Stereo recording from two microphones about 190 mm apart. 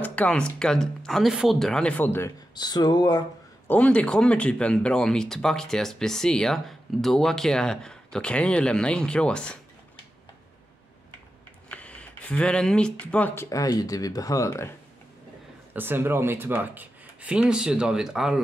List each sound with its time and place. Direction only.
0.0 s speech: 5° left (ahead or behind)
3.6 s speech: 10° left (ahead or behind)
11.7 s speech: 5° left (ahead or behind)
15.7 s speech: 10° right (ahead or behind)